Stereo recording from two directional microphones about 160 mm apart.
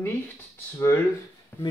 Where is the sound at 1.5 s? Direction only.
10° left (ahead or behind).